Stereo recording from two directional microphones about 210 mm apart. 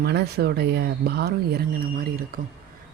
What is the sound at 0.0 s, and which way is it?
Speech, 50° right (ahead or behind).